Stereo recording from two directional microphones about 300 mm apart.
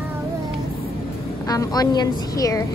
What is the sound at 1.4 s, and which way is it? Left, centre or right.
A woman's voice, centre.